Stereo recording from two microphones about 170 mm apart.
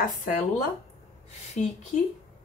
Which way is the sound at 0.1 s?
55° left (ahead or behind).